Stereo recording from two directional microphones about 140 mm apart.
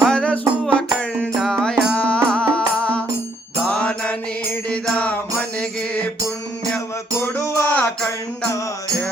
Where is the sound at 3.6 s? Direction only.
5° left (ahead or behind).